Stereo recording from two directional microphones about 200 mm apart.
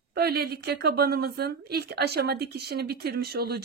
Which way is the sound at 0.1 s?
50° right (ahead or behind).